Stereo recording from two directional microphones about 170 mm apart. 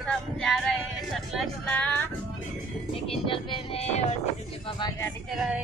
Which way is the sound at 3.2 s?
30° left (ahead or behind).